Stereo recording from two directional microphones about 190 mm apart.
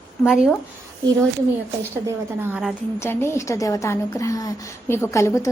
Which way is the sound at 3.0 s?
15° left (ahead or behind).